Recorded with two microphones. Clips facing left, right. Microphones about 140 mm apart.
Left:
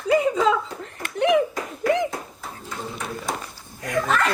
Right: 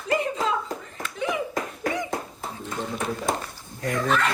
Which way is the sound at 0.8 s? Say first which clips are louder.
Left 7 dB; 65° left (ahead or behind).